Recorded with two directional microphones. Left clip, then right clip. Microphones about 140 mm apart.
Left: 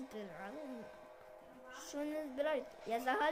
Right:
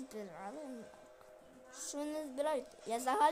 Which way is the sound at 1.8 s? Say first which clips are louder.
Right 1 dB; 25° right (ahead or behind).